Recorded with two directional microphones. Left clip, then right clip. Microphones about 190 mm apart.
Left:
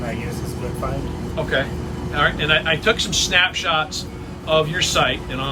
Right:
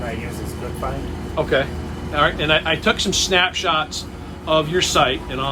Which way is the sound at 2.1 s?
20° right (ahead or behind).